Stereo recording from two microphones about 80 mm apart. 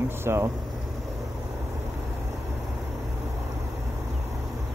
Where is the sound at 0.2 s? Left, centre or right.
Right.